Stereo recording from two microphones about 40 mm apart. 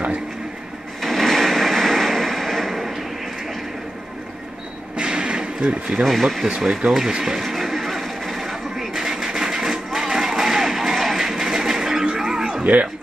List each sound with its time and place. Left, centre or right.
1.0 s a sound: centre
4.9 s a sound: right
5.7 s speech: right
6.0 s speech: centre
6.9 s speech: centre
7.4 s television: centre